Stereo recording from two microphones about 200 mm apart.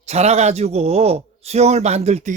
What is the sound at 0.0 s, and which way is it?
A man's voice, 35° right (ahead or behind).